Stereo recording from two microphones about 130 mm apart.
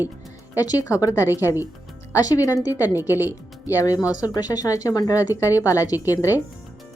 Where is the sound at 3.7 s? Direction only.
25° left (ahead or behind).